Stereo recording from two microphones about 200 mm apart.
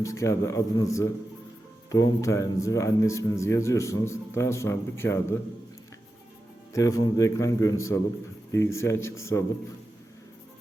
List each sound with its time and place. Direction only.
0.0 s speech: 15° left (ahead or behind)
6.7 s speech: 15° left (ahead or behind)